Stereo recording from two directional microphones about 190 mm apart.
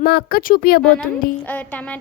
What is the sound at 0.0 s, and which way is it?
Speech, 55° left (ahead or behind).